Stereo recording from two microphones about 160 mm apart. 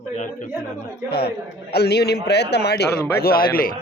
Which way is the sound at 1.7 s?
90° left.